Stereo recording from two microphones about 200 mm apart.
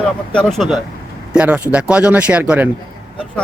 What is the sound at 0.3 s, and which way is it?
Speech, centre (ahead or behind).